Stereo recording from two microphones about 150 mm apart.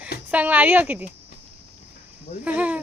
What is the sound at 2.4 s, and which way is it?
Speech, 10° right (ahead or behind).